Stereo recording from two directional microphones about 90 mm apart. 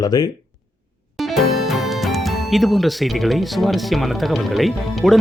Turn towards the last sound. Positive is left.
turn(degrees=0)  # may be behind; listen again after turning